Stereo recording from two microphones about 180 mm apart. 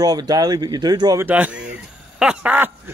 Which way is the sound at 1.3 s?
10° right (ahead or behind).